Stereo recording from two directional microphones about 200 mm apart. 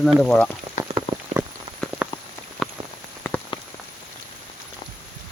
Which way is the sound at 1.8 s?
Centre (ahead or behind).